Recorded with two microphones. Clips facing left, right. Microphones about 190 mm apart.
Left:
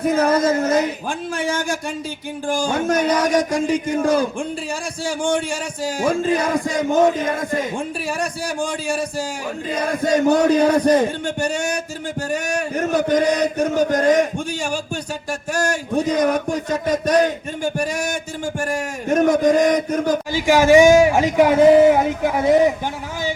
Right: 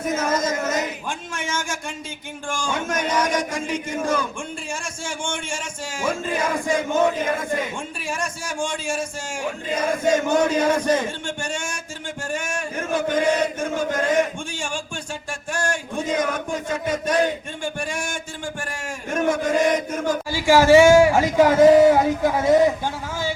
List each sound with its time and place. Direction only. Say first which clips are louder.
0.0 s a man's voice: left 6 dB; 35° left (ahead or behind)
8.2 s a man's voice: left 3 dB; 35° left (ahead or behind)
20.3 s speech: left 1 dB; 20° left (ahead or behind)